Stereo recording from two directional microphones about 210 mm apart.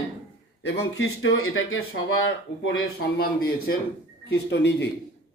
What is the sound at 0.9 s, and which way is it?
Speech, 80° left.